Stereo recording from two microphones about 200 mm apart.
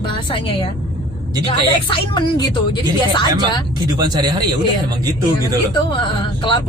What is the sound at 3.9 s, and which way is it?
Speech, 20° right (ahead or behind).